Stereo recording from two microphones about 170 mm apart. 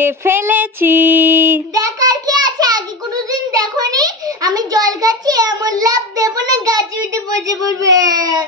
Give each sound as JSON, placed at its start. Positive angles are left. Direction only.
{"t": 0.0, "sound": "child singing", "side_deg": -15}
{"t": 3.3, "sound": "a child's voice", "side_deg": -20}